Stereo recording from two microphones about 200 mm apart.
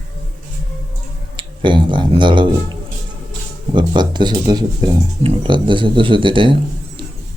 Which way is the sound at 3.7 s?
20° right (ahead or behind).